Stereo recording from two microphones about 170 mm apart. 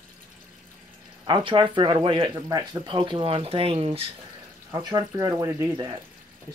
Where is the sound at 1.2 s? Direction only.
30° right (ahead or behind).